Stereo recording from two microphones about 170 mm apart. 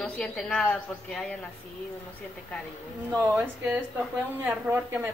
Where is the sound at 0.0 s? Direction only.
10° left (ahead or behind).